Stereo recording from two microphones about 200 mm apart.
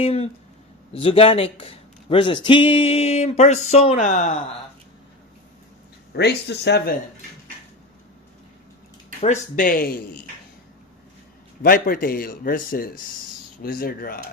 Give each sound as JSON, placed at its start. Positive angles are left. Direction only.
{"t": 0.0, "sound": "speech", "side_deg": 30}
{"t": 6.1, "sound": "speech", "side_deg": 55}
{"t": 9.2, "sound": "a man's voice", "side_deg": 40}
{"t": 11.6, "sound": "a man's voice", "side_deg": 45}